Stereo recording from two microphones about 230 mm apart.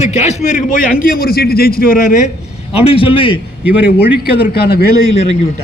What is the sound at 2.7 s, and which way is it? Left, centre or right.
Speech, left.